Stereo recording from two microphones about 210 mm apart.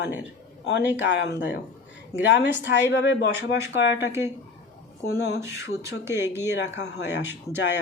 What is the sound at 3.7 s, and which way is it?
Speech, 55° left (ahead or behind).